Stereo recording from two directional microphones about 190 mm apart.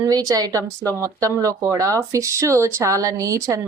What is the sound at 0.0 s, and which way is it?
Speech, 20° right (ahead or behind).